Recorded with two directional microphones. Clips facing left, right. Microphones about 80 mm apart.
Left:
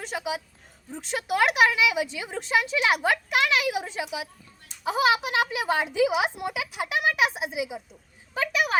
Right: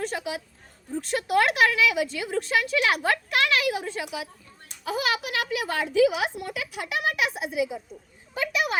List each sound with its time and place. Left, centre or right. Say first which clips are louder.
0.0 s a woman's voice: right 1 dB; centre